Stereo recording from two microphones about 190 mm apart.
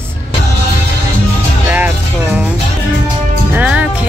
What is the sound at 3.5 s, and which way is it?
Speech, 5° right (ahead or behind).